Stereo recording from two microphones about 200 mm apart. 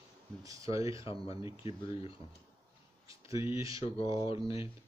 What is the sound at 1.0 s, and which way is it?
Speech, 25° left (ahead or behind).